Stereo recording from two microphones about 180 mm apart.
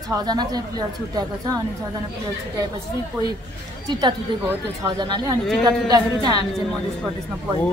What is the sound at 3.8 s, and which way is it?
Speech, 25° right (ahead or behind).